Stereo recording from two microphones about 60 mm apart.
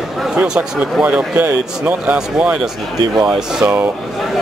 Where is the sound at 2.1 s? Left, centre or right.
Centre.